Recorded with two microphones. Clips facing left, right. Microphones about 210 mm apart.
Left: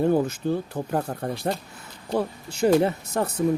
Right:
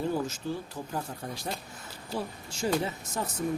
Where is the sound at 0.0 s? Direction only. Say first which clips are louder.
Left 9 dB; 60° left (ahead or behind).